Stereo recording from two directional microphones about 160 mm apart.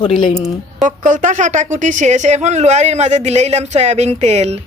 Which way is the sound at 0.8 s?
55° right (ahead or behind).